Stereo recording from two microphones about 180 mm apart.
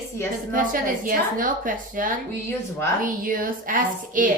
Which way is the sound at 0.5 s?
50° right (ahead or behind).